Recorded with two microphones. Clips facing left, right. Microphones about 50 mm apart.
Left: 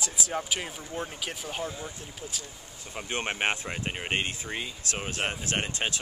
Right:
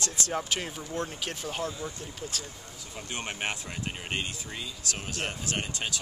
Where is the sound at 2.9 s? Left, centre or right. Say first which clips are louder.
Left 5 dB; left.